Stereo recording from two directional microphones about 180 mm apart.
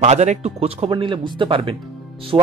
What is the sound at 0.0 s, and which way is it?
Speech, 40° right (ahead or behind).